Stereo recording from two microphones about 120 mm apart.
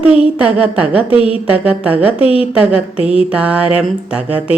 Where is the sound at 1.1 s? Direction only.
50° left (ahead or behind).